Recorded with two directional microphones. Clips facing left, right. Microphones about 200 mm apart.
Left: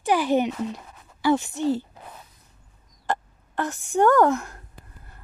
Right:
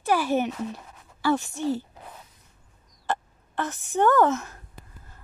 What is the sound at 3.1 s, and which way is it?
A woman's voice, 15° left (ahead or behind).